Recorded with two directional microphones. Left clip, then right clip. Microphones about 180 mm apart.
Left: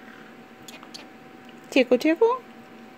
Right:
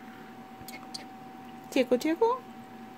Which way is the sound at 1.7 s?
25° left (ahead or behind).